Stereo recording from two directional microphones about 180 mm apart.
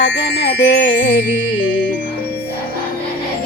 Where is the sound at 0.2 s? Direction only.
70° left (ahead or behind).